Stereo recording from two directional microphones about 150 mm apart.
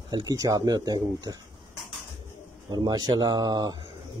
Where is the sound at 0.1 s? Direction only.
25° right (ahead or behind).